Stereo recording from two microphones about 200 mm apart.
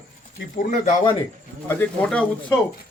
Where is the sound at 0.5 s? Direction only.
50° left (ahead or behind).